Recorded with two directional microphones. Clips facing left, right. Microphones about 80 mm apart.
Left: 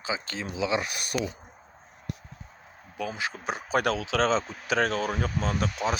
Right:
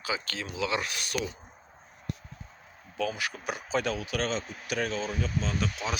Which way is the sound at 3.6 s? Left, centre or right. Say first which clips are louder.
Left 4 dB; left.